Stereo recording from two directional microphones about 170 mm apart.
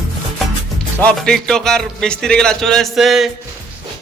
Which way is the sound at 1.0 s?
5° left (ahead or behind).